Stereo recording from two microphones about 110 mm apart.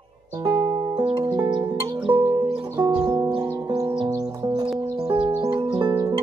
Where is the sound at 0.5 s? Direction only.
40° right (ahead or behind).